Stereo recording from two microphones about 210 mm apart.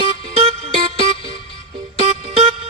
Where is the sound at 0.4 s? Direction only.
30° right (ahead or behind).